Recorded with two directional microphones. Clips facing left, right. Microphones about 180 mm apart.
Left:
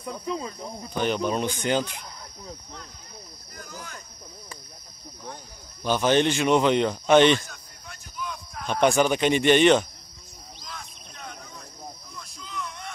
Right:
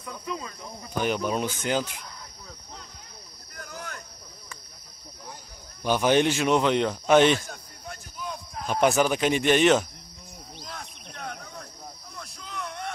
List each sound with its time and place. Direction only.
0.0 s speech: 30° left (ahead or behind)
1.0 s a man's voice: 5° right (ahead or behind)
3.5 s cricket: 60° right (ahead or behind)
5.8 s a man's voice: 10° right (ahead or behind)
7.4 s basketball bounce: 45° right (ahead or behind)
8.6 s a man's voice: 5° right (ahead or behind)
10.6 s cricket: 55° right (ahead or behind)
12.2 s a sound: 60° right (ahead or behind)